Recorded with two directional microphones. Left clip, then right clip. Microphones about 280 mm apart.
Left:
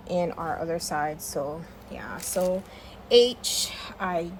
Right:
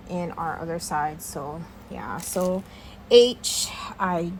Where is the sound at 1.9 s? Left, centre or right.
Centre.